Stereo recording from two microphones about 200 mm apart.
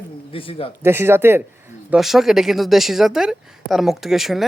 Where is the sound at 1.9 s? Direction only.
Centre (ahead or behind).